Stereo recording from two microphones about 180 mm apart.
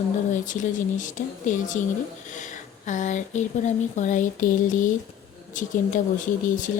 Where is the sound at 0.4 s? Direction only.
45° left (ahead or behind).